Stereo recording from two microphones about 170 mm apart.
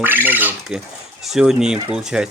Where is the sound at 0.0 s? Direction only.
10° right (ahead or behind).